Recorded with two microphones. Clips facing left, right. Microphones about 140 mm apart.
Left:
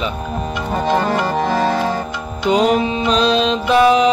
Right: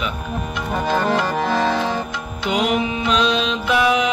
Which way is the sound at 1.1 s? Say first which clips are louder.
Left 2 dB; 10° left (ahead or behind).